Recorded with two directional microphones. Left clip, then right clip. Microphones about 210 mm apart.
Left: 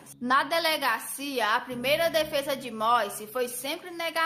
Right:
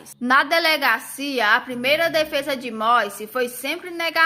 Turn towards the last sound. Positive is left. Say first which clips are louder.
# right 7 dB
turn(degrees=-10)  # may be behind; listen again after turning